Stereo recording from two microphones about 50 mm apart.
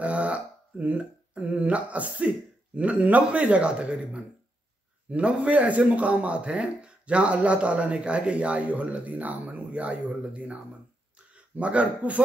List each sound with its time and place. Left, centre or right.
0.0 s a man's voice: right